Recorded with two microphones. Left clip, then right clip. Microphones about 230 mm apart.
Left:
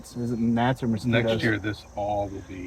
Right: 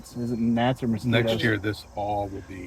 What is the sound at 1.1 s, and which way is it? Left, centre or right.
Speech, right.